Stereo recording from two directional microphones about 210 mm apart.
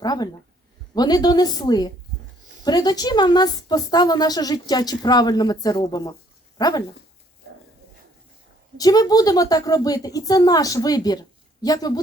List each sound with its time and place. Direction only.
0.0 s a woman's voice: 20° left (ahead or behind)
8.8 s a woman's voice: 20° left (ahead or behind)